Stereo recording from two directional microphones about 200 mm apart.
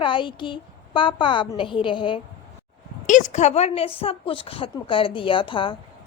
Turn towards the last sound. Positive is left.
turn(degrees=25)  # may be behind; listen again after turning